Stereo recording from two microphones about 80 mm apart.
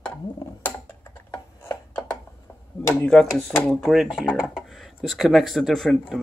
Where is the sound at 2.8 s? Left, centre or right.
Left.